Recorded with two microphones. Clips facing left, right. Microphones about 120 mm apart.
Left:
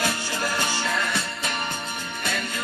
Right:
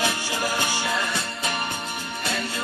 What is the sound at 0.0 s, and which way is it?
Music, 15° right (ahead or behind).